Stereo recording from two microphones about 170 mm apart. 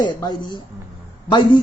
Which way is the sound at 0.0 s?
25° left (ahead or behind).